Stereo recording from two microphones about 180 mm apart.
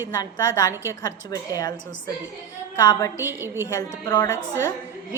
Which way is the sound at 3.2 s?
15° right (ahead or behind).